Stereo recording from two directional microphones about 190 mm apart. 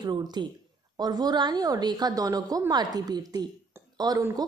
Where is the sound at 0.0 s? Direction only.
20° right (ahead or behind).